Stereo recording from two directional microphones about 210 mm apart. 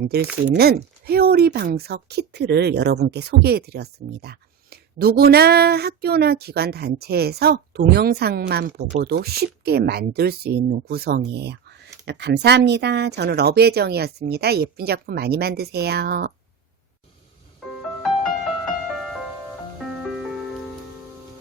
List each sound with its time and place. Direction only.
0.4 s speech: 50° right (ahead or behind)
17.6 s music: centre (ahead or behind)